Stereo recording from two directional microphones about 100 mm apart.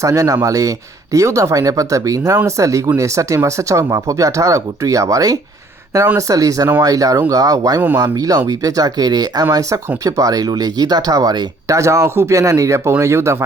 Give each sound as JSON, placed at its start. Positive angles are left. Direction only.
{"t": 0.0, "sound": "speech", "side_deg": -35}